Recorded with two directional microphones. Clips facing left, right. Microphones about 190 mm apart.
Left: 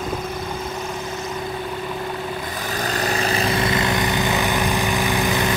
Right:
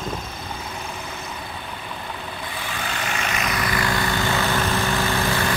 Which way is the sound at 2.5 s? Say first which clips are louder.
Left 3 dB; 40° left (ahead or behind).